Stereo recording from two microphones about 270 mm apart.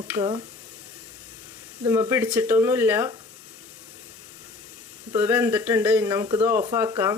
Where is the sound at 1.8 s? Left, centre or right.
Centre.